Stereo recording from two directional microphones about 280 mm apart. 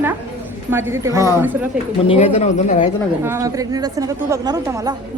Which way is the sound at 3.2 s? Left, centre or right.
Centre.